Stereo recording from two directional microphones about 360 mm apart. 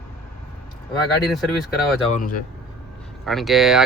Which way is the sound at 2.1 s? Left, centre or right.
Left.